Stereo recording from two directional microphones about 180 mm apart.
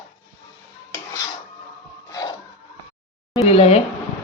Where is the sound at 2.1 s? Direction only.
20° left (ahead or behind).